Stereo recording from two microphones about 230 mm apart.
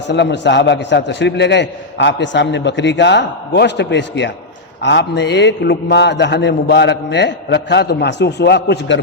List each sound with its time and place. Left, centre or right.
0.1 s a man's voice: left